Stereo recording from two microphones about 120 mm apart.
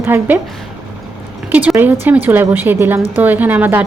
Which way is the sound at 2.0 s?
15° right (ahead or behind).